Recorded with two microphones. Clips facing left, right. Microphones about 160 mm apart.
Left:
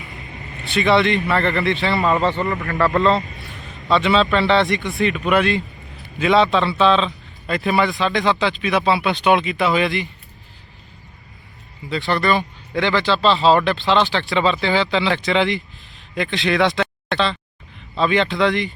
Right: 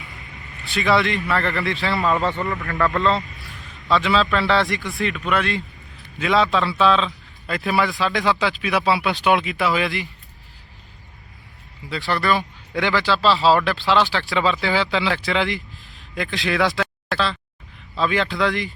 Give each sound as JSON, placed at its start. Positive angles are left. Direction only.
{"t": 0.1, "sound": "vehicle", "side_deg": 20}
{"t": 0.6, "sound": "a man's voice", "side_deg": 0}
{"t": 2.0, "sound": "speech", "side_deg": 20}
{"t": 3.2, "sound": "a sound", "side_deg": 20}
{"t": 3.8, "sound": "a man's voice", "side_deg": 0}
{"t": 11.9, "sound": "a man's voice", "side_deg": -5}